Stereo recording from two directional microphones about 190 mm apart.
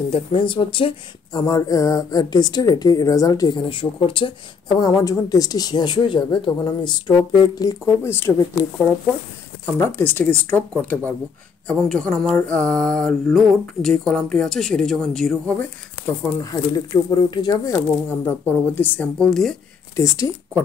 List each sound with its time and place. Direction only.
0.1 s speech: 25° left (ahead or behind); by 11.1 s 10° left (ahead or behind)
11.6 s mantra: 5° left (ahead or behind)
16.3 s speech: 20° left (ahead or behind); by 19.5 s centre (ahead or behind)
20.0 s speech: 15° left (ahead or behind)